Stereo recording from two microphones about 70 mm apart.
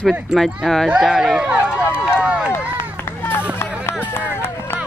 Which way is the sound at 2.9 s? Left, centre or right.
Left.